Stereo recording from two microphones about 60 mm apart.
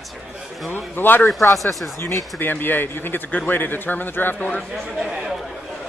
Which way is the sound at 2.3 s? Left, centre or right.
Left.